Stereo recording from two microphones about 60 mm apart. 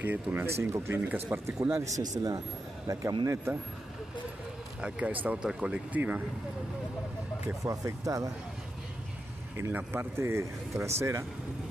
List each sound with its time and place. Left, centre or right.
0.0 s speech: right
0.5 s speech: right
0.9 s speech: right
2.0 s speech: right
2.9 s speech: right
4.8 s speech: centre
5.9 s speech: right
7.6 s speech: right
9.8 s speech: right
10.2 s speech: right